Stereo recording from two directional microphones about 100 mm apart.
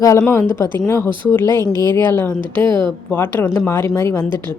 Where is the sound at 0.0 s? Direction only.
35° left (ahead or behind).